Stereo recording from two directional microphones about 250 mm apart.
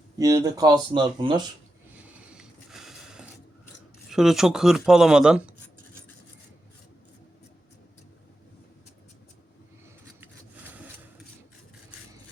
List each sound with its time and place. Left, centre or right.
0.2 s speech: centre
2.0 s a sound: centre
4.1 s speech: centre